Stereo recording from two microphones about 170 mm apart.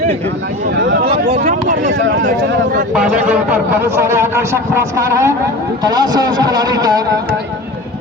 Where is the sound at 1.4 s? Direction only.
50° right (ahead or behind).